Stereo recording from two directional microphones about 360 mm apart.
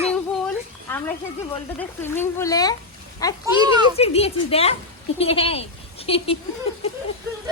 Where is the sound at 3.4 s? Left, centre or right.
Centre.